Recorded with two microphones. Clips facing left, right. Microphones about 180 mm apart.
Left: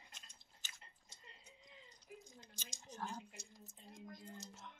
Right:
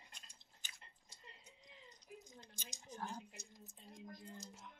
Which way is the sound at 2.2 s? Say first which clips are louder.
Right 1 dB; 20° right (ahead or behind).